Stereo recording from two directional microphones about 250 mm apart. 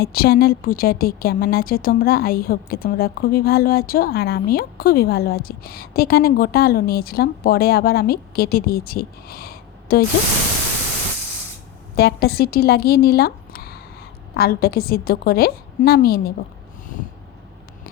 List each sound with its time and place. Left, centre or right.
0.0 s a woman's voice: left
11.9 s a woman's voice: left